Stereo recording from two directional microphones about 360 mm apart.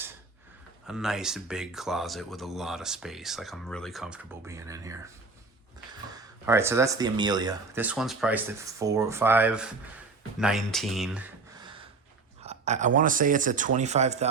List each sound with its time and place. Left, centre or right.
0.9 s speech: centre
6.1 s speech: centre
12.4 s a sound: centre
13.0 s speech: right